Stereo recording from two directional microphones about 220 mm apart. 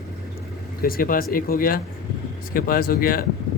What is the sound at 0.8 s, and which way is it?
Speech, 40° left (ahead or behind).